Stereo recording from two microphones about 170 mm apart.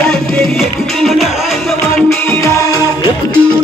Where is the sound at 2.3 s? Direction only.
20° left (ahead or behind).